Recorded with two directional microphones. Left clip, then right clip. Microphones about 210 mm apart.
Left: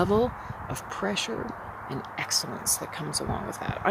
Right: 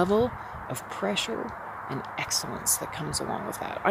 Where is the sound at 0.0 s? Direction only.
Centre (ahead or behind).